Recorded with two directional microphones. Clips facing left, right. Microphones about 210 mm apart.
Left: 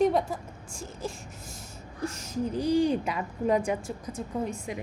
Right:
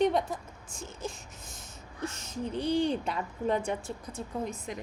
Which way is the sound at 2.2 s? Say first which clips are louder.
Left 4 dB; 25° right (ahead or behind).